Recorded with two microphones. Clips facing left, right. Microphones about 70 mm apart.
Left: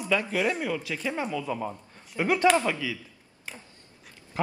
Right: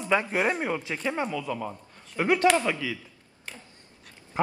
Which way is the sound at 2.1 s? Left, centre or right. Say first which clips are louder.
Right 1 dB; right.